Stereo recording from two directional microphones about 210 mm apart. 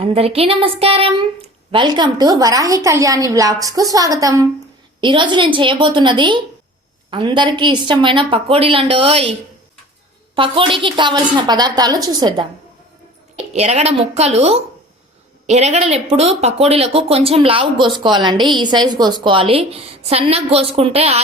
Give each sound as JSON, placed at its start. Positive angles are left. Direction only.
{"t": 0.0, "sound": "speech", "side_deg": -25}
{"t": 10.3, "sound": "speech", "side_deg": -25}
{"t": 13.5, "sound": "a woman's voice", "side_deg": -30}